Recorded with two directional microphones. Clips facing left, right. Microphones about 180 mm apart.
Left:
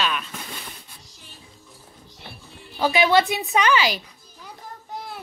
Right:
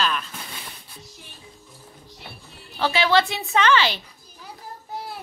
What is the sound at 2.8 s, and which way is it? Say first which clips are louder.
A woman's voice: left 2 dB; 20° left (ahead or behind).